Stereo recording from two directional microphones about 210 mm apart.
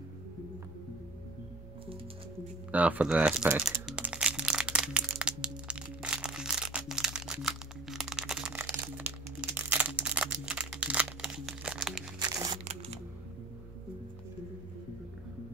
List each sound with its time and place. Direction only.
2.7 s crumpling: 5° right (ahead or behind)
12.2 s crumpling: 20° right (ahead or behind)